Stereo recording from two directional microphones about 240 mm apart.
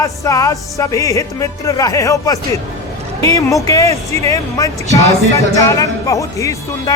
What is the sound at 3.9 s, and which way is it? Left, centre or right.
Speech, right.